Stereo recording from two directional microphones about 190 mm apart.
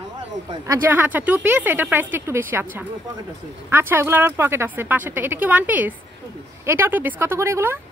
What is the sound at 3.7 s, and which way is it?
Speech, 10° right (ahead or behind).